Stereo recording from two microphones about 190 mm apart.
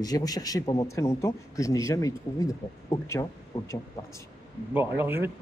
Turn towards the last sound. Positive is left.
turn(degrees=-10)  # may be behind; listen again after turning